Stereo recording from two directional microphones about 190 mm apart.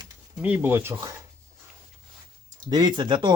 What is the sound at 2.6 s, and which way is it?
Speech, 25° right (ahead or behind).